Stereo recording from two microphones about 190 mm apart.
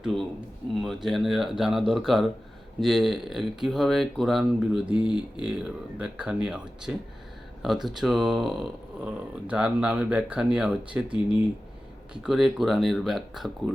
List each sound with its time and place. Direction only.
0.0 s speech: centre (ahead or behind)
4.9 s speech: 25° left (ahead or behind)
5.4 s speech: 5° right (ahead or behind)